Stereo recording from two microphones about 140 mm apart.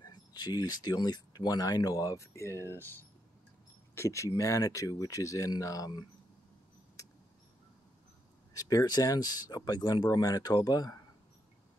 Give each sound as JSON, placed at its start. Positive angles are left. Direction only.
{"t": 0.0, "sound": "speech", "side_deg": 30}
{"t": 8.5, "sound": "speech", "side_deg": 25}